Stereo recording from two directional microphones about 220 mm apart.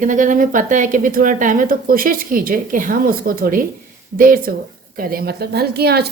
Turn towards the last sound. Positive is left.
turn(degrees=-45)  # may be behind; listen again after turning